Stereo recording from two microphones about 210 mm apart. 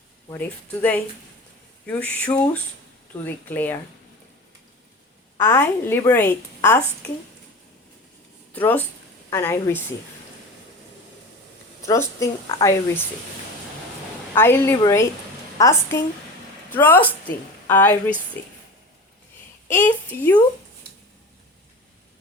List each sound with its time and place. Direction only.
0.3 s a woman's voice: 5° left (ahead or behind)
5.4 s a woman's voice: 10° left (ahead or behind)
8.5 s a woman's voice: 10° left (ahead or behind)
11.9 s a woman's voice: 15° left (ahead or behind)
14.3 s a woman's voice: 10° left (ahead or behind)
19.6 s a woman's voice: 10° left (ahead or behind)